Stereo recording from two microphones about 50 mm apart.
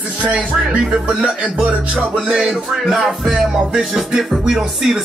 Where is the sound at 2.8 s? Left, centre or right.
Centre.